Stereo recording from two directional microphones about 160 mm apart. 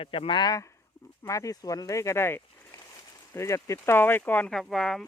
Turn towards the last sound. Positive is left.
turn(degrees=0)  # may be behind; listen again after turning